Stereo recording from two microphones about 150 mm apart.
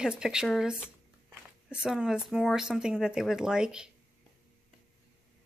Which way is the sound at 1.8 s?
5° right (ahead or behind).